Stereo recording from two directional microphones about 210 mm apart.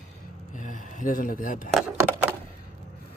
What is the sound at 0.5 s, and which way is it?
Speech, 35° left (ahead or behind).